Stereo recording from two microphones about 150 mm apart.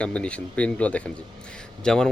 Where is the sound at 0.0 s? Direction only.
10° left (ahead or behind).